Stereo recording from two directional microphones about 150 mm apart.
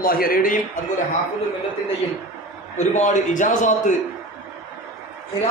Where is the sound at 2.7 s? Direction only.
50° left (ahead or behind).